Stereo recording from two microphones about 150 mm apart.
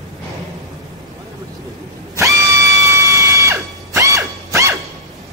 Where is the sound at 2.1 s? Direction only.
20° right (ahead or behind).